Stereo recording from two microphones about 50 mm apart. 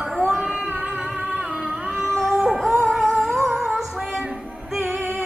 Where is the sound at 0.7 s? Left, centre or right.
Right.